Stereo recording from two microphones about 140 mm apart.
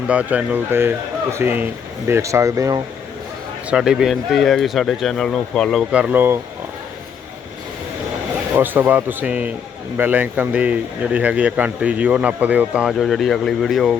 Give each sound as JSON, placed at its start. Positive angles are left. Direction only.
{"t": 0.1, "sound": "speech", "side_deg": -10}
{"t": 3.7, "sound": "speech", "side_deg": -5}
{"t": 5.9, "sound": "speech", "side_deg": -10}
{"t": 8.5, "sound": "speech", "side_deg": -15}